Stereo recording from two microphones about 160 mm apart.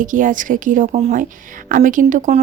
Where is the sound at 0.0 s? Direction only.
55° right (ahead or behind).